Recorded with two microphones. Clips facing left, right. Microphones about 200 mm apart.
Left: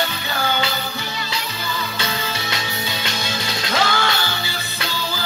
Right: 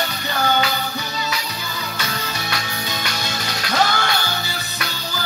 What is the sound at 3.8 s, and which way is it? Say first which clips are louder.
Music: right 2 dB; 45° right (ahead or behind).